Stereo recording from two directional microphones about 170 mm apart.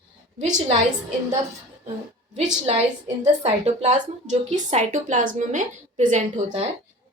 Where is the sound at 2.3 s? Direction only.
40° right (ahead or behind).